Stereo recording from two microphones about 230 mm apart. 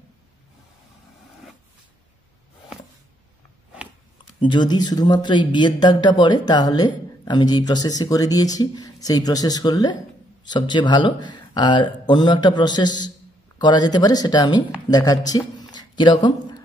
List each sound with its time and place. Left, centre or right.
4.4 s speech: centre